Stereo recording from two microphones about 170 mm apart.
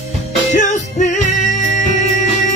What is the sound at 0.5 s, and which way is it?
Music, 45° left (ahead or behind).